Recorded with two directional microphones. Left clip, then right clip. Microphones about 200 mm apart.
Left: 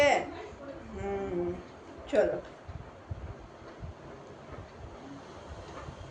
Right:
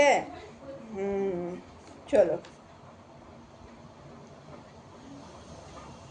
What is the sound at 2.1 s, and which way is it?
Speech, 55° right (ahead or behind).